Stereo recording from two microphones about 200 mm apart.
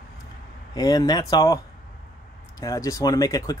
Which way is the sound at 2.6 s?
15° left (ahead or behind).